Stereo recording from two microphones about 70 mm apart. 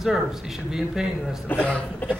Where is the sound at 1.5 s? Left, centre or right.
Left.